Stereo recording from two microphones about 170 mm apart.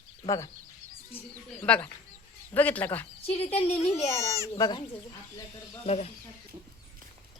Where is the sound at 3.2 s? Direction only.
35° left (ahead or behind).